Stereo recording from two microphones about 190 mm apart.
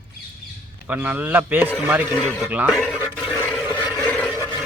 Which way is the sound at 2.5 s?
5° right (ahead or behind).